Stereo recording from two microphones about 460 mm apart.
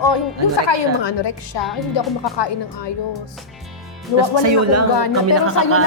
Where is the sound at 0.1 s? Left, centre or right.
Left.